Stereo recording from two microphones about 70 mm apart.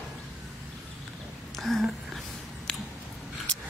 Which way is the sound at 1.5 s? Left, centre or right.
Centre.